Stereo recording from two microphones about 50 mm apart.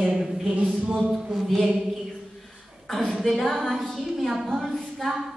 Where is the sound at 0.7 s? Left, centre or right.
Right.